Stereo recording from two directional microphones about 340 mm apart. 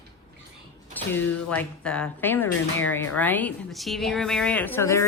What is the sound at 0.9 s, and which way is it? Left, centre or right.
Speech, centre.